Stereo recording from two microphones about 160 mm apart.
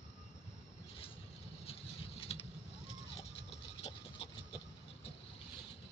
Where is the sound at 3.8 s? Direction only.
35° left (ahead or behind).